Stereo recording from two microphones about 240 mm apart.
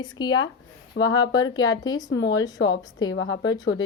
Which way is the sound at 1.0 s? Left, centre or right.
Left.